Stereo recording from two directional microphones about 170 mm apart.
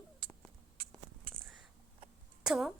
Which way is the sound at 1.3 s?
60° right (ahead or behind).